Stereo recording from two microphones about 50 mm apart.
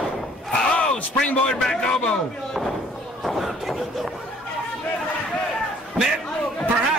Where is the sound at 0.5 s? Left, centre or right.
Left.